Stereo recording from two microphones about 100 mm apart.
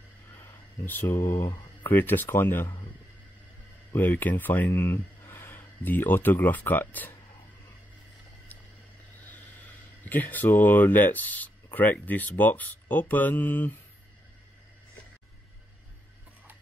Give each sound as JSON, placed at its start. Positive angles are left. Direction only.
{"t": 0.3, "sound": "a sound", "side_deg": 35}
{"t": 0.8, "sound": "speech", "side_deg": 20}
{"t": 1.5, "sound": "a sound", "side_deg": 45}
{"t": 1.9, "sound": "speech", "side_deg": 20}
{"t": 3.9, "sound": "speech", "side_deg": 20}
{"t": 10.0, "sound": "speech", "side_deg": 20}